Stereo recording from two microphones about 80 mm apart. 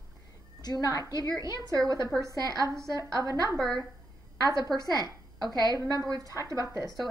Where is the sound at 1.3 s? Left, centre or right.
Right.